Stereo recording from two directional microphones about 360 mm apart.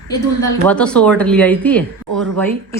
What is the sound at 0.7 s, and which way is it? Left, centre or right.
Speech, centre.